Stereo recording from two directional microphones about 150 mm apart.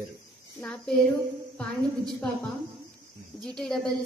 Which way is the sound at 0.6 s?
5° left (ahead or behind).